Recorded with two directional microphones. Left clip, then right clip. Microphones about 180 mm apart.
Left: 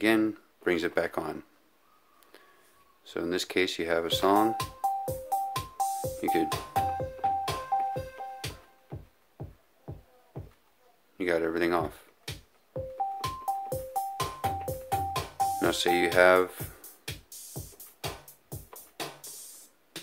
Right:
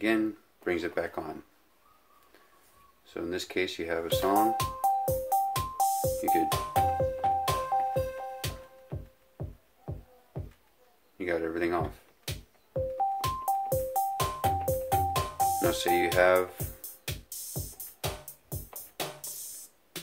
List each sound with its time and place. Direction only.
0.0 s speech: 45° left (ahead or behind)
3.1 s speech: 45° left (ahead or behind)
4.6 s music: 45° right (ahead or behind)
11.1 s speech: 45° left (ahead or behind)
12.3 s music: 45° right (ahead or behind)
15.6 s speech: 40° left (ahead or behind)
16.8 s music: 45° right (ahead or behind)